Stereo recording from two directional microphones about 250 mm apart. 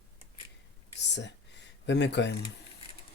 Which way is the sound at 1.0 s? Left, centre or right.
Left.